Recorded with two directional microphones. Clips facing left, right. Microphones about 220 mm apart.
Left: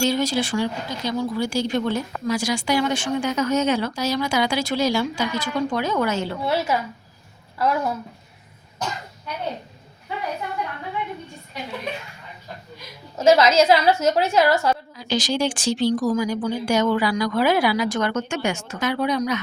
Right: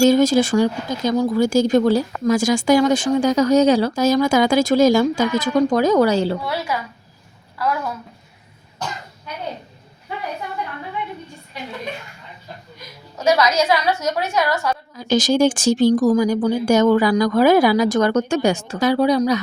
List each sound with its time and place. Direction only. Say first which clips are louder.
0.0 s speech: right 8 dB; 45° right (ahead or behind)
4.0 s speech: right 8 dB; 45° right (ahead or behind)
6.4 s a woman's voice: left 2 dB; 25° left (ahead or behind)
13.1 s a woman's voice: left 2 dB; 25° left (ahead or behind)
14.9 s speech: right 7 dB; 45° right (ahead or behind)